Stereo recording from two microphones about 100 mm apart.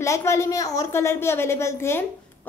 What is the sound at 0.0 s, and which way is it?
A woman's voice, 30° left (ahead or behind).